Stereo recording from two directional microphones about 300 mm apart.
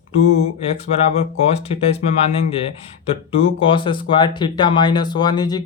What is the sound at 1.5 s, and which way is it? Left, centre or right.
Speech, left.